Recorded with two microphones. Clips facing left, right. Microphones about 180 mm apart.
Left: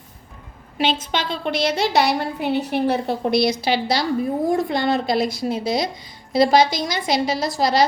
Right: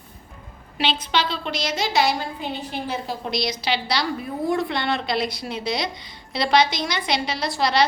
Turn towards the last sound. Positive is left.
turn(degrees=45)  # may be behind; listen again after turning